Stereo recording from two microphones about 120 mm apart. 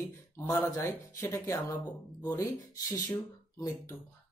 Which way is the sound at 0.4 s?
20° left (ahead or behind).